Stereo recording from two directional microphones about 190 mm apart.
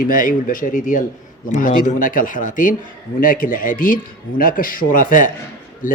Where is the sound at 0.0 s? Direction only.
45° left (ahead or behind).